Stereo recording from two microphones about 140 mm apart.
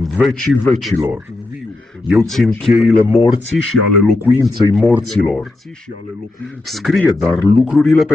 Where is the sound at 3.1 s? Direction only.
40° left (ahead or behind).